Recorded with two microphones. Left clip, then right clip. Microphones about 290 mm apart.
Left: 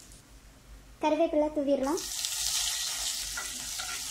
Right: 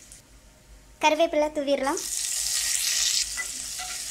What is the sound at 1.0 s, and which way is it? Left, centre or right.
Speech, right.